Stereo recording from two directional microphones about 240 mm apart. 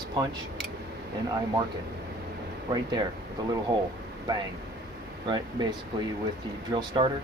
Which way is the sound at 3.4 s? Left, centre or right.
Centre.